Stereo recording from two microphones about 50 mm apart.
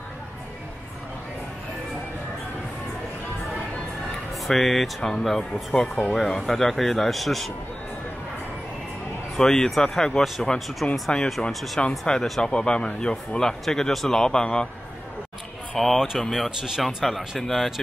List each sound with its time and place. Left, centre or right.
4.5 s a man's voice: centre
9.4 s a man's voice: centre
11.8 s speech: centre
15.8 s a man's voice: centre
16.4 s a man's voice: centre